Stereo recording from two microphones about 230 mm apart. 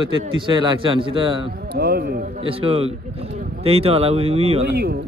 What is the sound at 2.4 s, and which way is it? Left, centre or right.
A man's voice, right.